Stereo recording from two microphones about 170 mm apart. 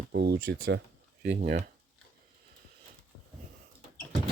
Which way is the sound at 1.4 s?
50° right (ahead or behind).